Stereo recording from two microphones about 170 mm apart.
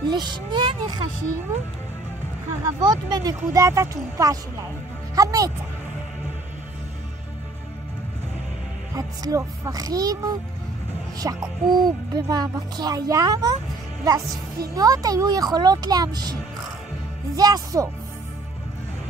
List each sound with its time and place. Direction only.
0.1 s speech: 25° right (ahead or behind)
2.6 s speech: 25° right (ahead or behind)
8.9 s speech: 20° right (ahead or behind)
11.1 s speech: 25° right (ahead or behind)
17.4 s speech: 20° right (ahead or behind)